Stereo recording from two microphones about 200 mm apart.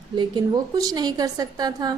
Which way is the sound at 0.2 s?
20° right (ahead or behind).